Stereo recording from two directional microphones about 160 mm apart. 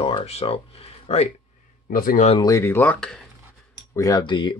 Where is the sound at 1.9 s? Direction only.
60° left (ahead or behind).